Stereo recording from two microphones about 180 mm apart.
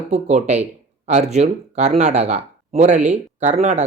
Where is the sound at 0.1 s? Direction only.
40° right (ahead or behind).